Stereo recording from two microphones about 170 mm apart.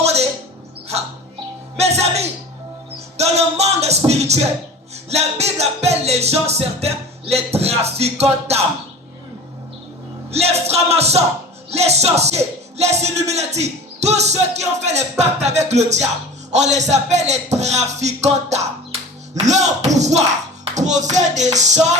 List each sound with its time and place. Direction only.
0.0 s a sound: 40° right (ahead or behind)
1.8 s speech: 40° right (ahead or behind)
3.2 s music: 40° right (ahead or behind)
5.0 s a man's voice: 40° right (ahead or behind)
10.3 s music: 40° right (ahead or behind)
11.7 s a man's voice: 40° right (ahead or behind)
20.7 s music: 45° right (ahead or behind)